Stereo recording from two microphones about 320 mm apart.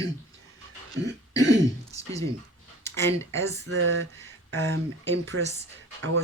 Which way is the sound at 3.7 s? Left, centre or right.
Right.